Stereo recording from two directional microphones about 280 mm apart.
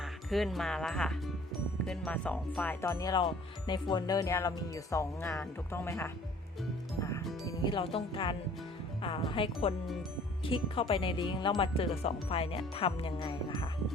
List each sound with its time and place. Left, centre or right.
0.0 s speech: centre
7.4 s speech: centre